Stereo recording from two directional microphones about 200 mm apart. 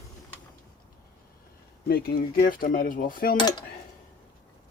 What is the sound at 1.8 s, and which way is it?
Cutlery, 50° left (ahead or behind).